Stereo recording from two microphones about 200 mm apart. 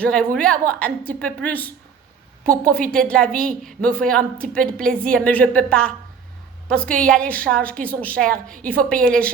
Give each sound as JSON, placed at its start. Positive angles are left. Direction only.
{"t": 0.0, "sound": "a woman's voice", "side_deg": 5}